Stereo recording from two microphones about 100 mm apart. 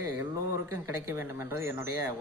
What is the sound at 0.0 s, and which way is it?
Speech, 25° right (ahead or behind).